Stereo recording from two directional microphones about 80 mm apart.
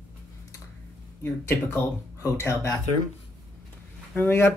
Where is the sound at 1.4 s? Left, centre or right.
Left.